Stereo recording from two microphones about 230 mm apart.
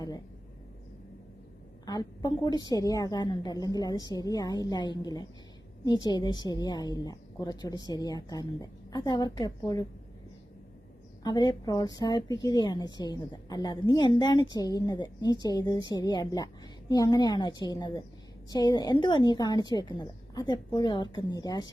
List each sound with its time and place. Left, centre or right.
2.2 s a woman's voice: centre
11.2 s a woman's voice: centre